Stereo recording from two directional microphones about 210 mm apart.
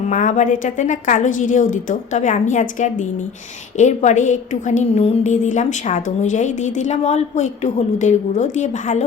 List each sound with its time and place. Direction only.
0.1 s a woman's voice: 35° left (ahead or behind)